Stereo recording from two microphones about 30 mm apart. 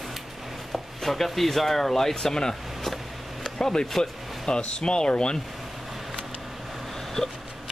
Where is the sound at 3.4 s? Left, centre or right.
Left.